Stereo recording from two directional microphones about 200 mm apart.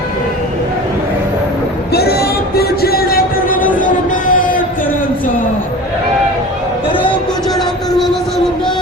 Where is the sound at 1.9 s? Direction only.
50° left (ahead or behind).